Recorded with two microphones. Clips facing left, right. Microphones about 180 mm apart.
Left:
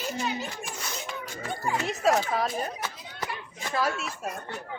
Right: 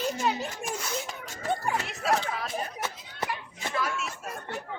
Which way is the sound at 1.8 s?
40° left (ahead or behind).